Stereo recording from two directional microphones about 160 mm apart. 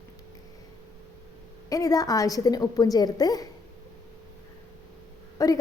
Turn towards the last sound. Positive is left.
turn(degrees=20)  # may be behind; listen again after turning